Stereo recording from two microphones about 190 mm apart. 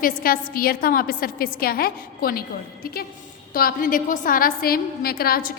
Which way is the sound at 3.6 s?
50° left (ahead or behind).